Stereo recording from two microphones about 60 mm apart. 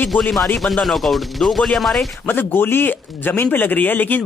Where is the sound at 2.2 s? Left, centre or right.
Left.